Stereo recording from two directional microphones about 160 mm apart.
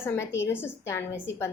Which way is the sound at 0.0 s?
15° left (ahead or behind).